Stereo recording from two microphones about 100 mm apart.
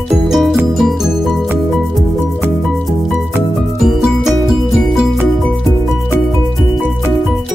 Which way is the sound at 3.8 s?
5° right (ahead or behind).